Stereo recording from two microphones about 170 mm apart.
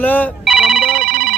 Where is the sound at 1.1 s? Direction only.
65° right (ahead or behind).